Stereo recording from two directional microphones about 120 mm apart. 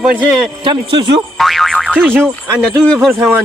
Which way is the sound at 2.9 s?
Centre (ahead or behind).